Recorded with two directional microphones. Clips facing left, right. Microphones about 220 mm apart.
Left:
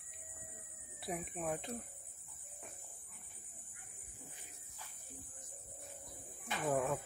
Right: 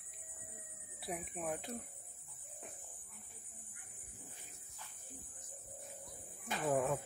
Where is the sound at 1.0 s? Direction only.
Centre (ahead or behind).